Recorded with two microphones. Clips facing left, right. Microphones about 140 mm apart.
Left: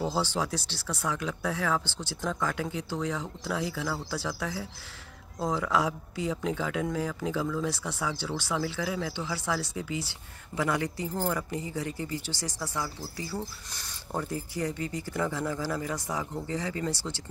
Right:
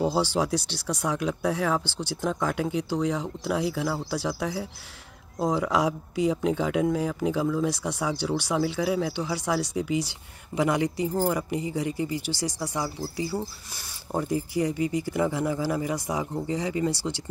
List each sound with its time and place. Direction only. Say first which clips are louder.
0.0 s speech: right 5 dB; 15° right (ahead or behind)